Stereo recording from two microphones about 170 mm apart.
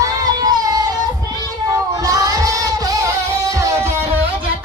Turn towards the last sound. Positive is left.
turn(degrees=-15)  # may be behind; listen again after turning